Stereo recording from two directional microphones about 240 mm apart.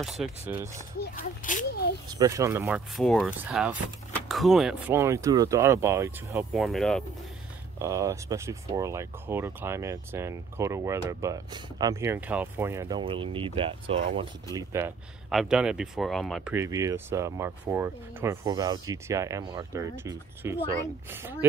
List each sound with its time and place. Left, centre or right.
0.0 s speech: centre
1.1 s speech: left
2.0 s speech: centre
3.0 s speech: centre
7.8 s speech: centre